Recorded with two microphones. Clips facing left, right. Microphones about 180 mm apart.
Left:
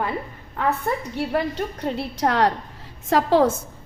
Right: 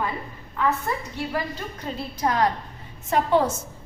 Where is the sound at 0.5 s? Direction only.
60° left (ahead or behind).